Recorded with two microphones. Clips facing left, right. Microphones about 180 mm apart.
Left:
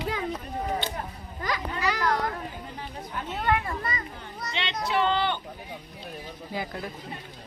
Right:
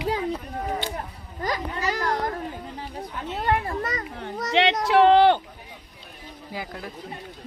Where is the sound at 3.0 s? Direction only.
35° right (ahead or behind).